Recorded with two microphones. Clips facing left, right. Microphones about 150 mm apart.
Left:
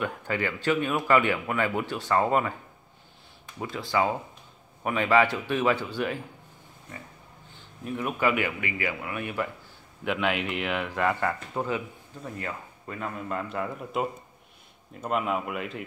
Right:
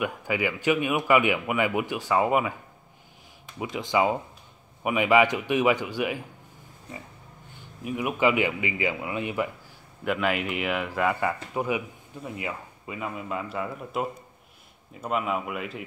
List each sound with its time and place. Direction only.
0.0 s speech: 10° right (ahead or behind)
3.5 s speech: 15° right (ahead or behind)
7.8 s speech: 15° right (ahead or behind)
10.0 s speech: 5° right (ahead or behind)